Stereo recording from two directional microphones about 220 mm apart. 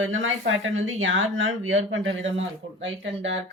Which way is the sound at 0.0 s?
65° right (ahead or behind).